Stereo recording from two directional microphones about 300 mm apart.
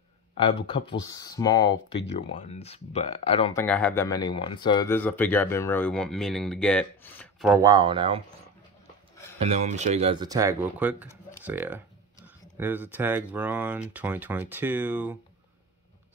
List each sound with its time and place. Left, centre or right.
0.4 s speech: centre
3.5 s speech: centre
7.5 s speech: centre
9.4 s speech: right; by 15.1 s centre